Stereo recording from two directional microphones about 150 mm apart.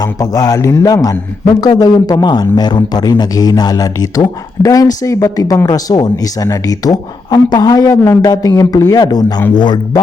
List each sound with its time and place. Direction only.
0.0 s speech: 25° left (ahead or behind)